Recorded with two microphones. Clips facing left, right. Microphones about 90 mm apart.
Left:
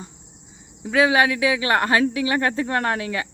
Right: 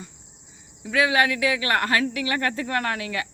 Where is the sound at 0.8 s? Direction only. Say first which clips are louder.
Left 3 dB; 30° left (ahead or behind).